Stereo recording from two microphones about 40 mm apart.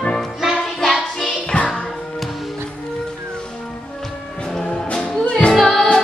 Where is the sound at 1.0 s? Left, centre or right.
Centre.